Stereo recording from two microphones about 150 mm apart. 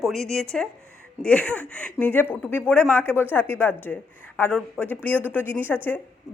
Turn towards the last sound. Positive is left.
turn(degrees=15)  # may be behind; listen again after turning